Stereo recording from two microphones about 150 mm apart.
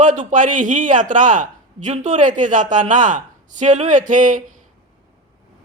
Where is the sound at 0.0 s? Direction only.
55° right (ahead or behind).